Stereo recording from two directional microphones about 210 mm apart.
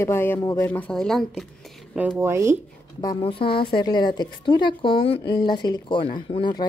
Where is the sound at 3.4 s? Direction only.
45° left (ahead or behind).